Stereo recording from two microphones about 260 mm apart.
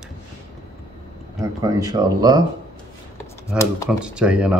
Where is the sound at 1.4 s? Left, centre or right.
Centre.